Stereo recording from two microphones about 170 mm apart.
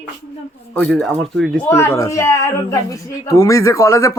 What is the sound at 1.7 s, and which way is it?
A woman's voice, 15° left (ahead or behind).